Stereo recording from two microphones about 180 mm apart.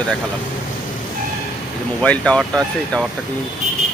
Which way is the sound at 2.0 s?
5° left (ahead or behind).